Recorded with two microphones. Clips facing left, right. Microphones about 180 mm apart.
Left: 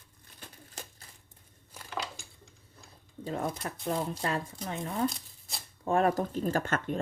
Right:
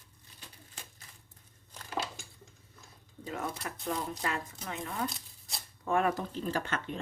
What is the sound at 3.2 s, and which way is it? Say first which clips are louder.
Speech: left 4 dB; 30° left (ahead or behind).